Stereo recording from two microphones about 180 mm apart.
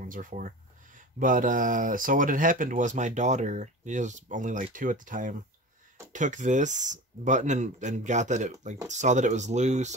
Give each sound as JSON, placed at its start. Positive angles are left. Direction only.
{"t": 0.0, "sound": "speech", "side_deg": -45}